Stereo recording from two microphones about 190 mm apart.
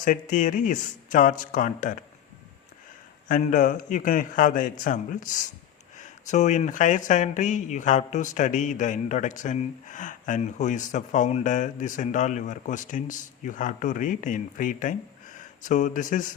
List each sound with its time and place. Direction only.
0.0 s a man's voice: 45° left (ahead or behind)
3.2 s a man's voice: 45° left (ahead or behind)